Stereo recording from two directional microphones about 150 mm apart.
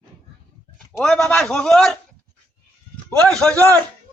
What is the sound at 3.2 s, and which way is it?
Speech, 5° left (ahead or behind).